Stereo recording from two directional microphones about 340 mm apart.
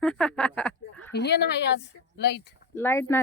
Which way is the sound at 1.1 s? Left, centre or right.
Left.